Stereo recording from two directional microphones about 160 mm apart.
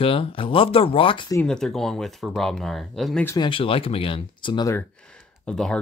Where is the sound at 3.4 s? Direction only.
35° left (ahead or behind).